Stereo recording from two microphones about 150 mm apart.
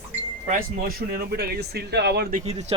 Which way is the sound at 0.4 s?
75° right (ahead or behind).